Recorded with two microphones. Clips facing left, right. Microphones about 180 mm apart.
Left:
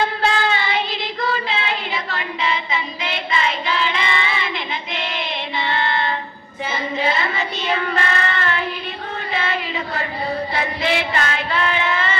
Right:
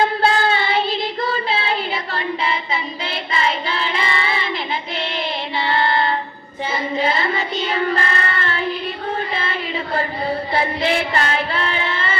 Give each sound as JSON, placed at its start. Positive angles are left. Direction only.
{"t": 0.2, "sound": "child singing", "side_deg": -30}
{"t": 9.3, "sound": "a sound", "side_deg": -30}
{"t": 10.5, "sound": "child singing", "side_deg": -30}